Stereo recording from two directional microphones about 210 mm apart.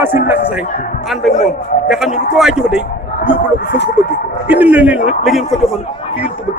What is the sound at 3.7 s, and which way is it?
Speech, 55° left (ahead or behind).